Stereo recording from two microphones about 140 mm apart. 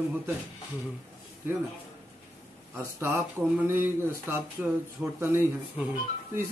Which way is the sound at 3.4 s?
10° right (ahead or behind).